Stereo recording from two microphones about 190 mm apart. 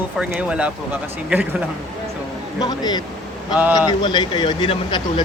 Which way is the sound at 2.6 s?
20° left (ahead or behind).